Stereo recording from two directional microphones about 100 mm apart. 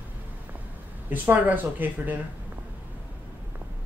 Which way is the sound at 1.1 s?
20° right (ahead or behind).